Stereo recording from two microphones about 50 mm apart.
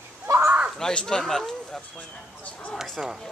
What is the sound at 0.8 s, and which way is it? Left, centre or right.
Speech, centre.